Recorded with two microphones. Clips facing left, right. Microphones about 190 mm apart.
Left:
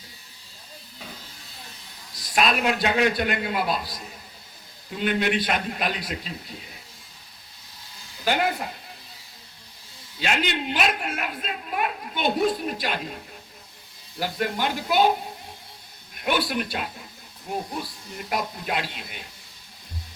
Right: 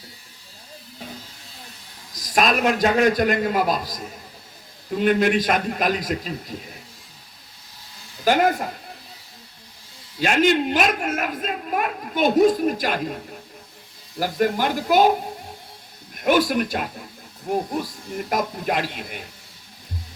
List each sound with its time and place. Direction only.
2.1 s a woman's voice: 45° right (ahead or behind)
8.2 s a woman's voice: 45° right (ahead or behind)
10.2 s a woman's voice: 45° right (ahead or behind)
14.2 s a woman's voice: 45° right (ahead or behind)
16.1 s a woman's voice: 45° right (ahead or behind)